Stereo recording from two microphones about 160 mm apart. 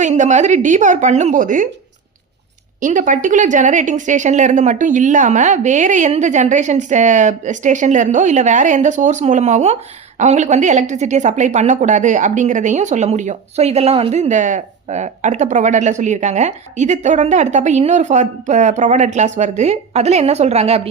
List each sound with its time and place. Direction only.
0.0 s a woman's voice: 50° right (ahead or behind)
2.8 s a woman's voice: 55° right (ahead or behind); by 20.9 s 40° right (ahead or behind)